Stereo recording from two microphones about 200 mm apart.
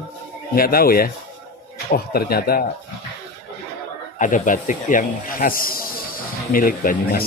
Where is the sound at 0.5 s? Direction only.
45° left (ahead or behind).